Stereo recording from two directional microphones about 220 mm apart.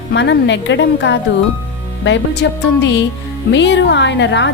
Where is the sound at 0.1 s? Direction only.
50° left (ahead or behind).